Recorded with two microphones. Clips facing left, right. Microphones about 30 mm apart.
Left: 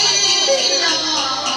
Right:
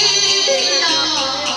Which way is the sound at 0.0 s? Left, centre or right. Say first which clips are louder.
Right 1 dB; centre.